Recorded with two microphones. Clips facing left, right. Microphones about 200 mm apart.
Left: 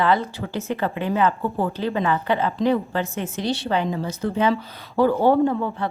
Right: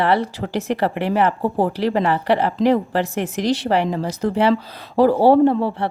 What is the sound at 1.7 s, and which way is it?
Speech, 80° right.